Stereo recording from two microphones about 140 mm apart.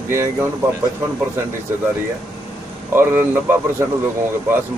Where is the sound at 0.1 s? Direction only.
20° right (ahead or behind).